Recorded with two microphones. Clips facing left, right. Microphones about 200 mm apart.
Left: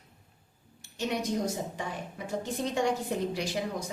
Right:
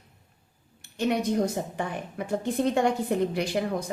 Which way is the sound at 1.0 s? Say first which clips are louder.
Right 6 dB; 55° right (ahead or behind).